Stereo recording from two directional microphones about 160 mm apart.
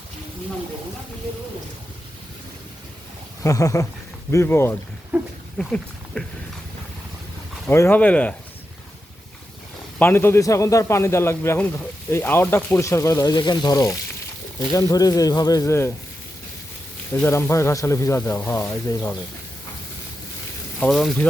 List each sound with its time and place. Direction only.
3.4 s a man's voice: 20° left (ahead or behind)
5.1 s a sound: 10° right (ahead or behind)
5.5 s speech: 5° left (ahead or behind)
7.7 s a man's voice: 15° left (ahead or behind)
10.0 s a man's voice: 15° left (ahead or behind)
17.2 s a man's voice: 15° left (ahead or behind)
20.7 s speech: 5° left (ahead or behind)